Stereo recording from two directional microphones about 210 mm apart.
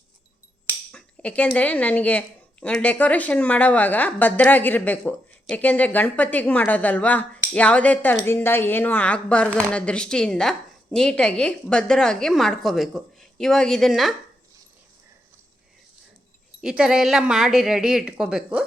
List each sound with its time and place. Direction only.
0.9 s a woman's voice: 5° left (ahead or behind)
16.6 s a woman's voice: 5° right (ahead or behind)